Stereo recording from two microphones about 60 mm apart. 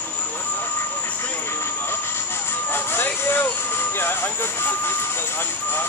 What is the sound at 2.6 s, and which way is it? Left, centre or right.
Music, left.